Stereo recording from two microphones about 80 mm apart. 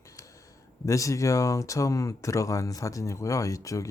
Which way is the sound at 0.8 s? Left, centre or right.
Left.